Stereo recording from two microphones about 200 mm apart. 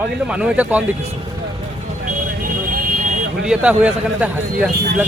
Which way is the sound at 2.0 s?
40° right (ahead or behind).